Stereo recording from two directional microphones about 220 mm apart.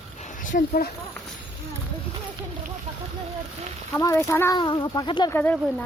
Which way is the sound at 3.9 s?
10° left (ahead or behind).